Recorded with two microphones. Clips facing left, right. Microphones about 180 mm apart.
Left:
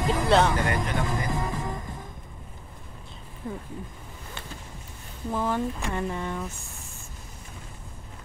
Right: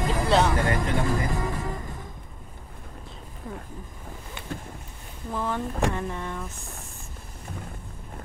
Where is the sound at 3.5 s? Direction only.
Centre (ahead or behind).